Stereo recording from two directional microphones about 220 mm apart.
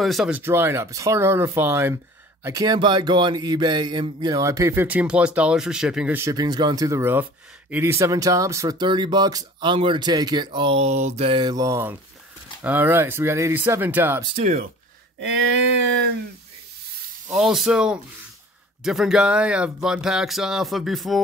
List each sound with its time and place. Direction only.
0.0 s speech: centre (ahead or behind)
14.2 s speech: 30° right (ahead or behind)
17.3 s speech: centre (ahead or behind)